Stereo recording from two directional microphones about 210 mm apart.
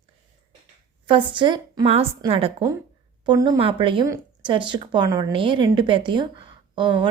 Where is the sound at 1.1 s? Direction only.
25° right (ahead or behind).